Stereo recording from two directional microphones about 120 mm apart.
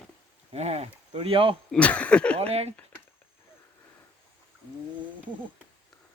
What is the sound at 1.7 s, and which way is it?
Speech, 10° left (ahead or behind).